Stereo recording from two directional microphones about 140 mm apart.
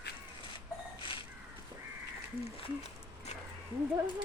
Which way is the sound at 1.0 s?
35° left (ahead or behind).